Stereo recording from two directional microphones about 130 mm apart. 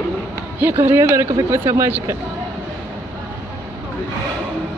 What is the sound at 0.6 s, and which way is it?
Speech, 15° right (ahead or behind).